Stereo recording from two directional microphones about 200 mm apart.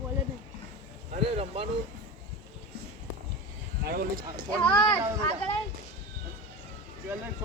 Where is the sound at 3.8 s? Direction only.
50° right (ahead or behind).